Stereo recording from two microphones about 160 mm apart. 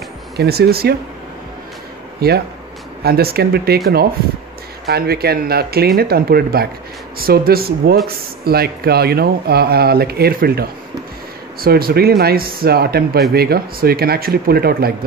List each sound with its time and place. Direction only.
0.4 s speech: 80° right
2.1 s speech: 80° right
4.8 s speech: 80° right